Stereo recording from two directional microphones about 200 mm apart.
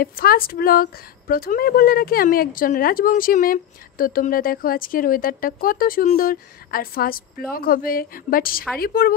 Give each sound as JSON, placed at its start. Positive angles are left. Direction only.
{"t": 0.0, "sound": "speech", "side_deg": 50}